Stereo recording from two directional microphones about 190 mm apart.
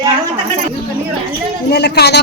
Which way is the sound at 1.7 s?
60° left (ahead or behind).